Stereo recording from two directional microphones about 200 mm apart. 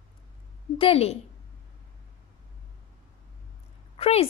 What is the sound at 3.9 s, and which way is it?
Speech, 30° left (ahead or behind).